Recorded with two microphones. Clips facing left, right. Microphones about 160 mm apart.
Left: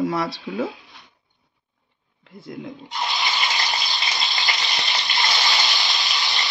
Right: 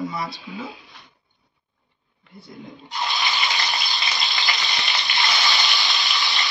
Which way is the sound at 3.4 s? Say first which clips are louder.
Even; 20° left (ahead or behind).